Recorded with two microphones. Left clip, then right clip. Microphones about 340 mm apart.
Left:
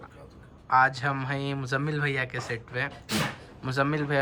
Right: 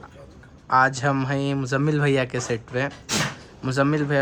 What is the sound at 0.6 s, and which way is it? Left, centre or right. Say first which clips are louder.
Speech: right 3 dB; centre.